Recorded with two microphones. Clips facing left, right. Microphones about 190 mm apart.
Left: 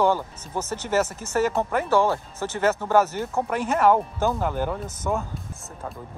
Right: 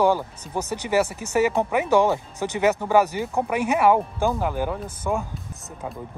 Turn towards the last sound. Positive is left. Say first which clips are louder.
# right 1 dB
turn(degrees=-10)  # may be behind; listen again after turning